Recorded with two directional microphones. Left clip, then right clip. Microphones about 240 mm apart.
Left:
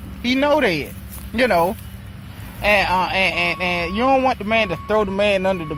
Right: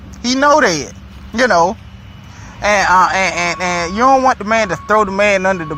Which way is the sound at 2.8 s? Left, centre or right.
Centre.